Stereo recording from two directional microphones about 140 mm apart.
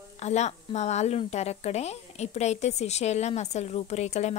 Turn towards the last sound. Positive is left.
turn(degrees=55)  # may be behind; listen again after turning